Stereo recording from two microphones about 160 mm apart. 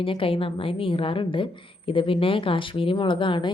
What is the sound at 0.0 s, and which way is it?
Speech, 35° left (ahead or behind).